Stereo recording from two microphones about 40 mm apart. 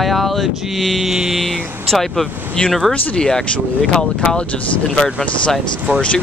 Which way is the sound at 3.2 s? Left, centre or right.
Centre.